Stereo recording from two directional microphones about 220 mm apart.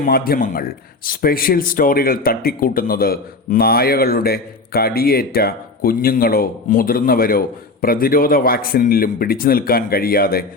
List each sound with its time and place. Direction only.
0.0 s speech: 40° left (ahead or behind)